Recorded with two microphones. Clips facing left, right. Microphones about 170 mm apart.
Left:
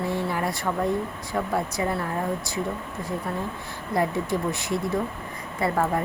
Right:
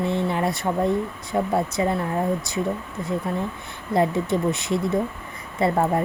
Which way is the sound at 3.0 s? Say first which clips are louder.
Right 4 dB; 20° right (ahead or behind).